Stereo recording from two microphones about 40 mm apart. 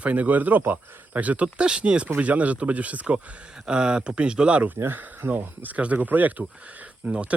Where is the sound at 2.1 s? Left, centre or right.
Right.